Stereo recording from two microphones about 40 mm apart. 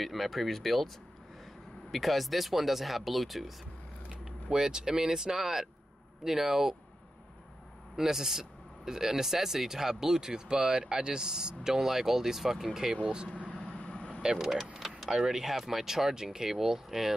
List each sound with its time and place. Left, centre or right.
0.0 s speech: centre
1.9 s speech: centre
4.2 s speech: centre
7.9 s speech: centre
12.9 s speech: right
13.3 s vehicle: left
13.6 s vehicle: left
14.2 s speech: centre
14.8 s vehicle: centre
15.0 s speech: centre